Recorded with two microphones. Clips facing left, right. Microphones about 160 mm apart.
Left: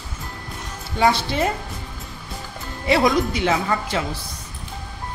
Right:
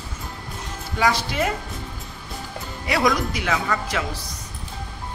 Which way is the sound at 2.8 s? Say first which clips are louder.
Left 4 dB; 25° left (ahead or behind).